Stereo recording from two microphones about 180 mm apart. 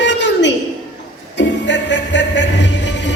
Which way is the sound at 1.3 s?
75° left (ahead or behind).